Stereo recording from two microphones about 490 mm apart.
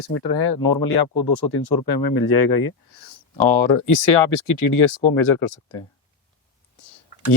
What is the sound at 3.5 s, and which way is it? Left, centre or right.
Speech, left.